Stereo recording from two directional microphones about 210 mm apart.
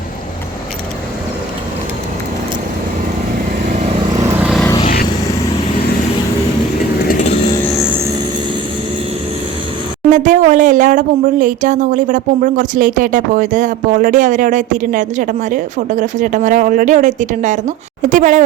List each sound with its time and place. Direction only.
4.1 s vehicle: 15° right (ahead or behind)
4.6 s vehicle: 20° left (ahead or behind)
10.1 s speech: 35° right (ahead or behind)